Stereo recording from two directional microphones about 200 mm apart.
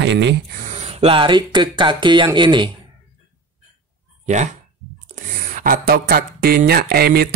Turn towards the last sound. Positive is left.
turn(degrees=-50)  # may be behind; listen again after turning